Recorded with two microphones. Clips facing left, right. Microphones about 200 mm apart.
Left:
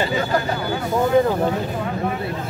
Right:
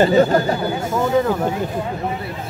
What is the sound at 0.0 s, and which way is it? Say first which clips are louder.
Speech: right 8 dB; 45° right (ahead or behind).